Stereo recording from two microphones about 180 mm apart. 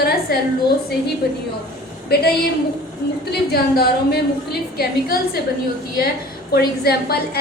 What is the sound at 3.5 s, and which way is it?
A woman's voice, 60° left (ahead or behind).